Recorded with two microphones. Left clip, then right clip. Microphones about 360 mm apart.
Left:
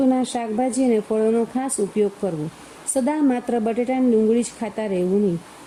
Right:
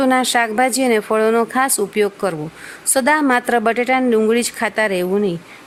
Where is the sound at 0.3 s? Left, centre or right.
Right.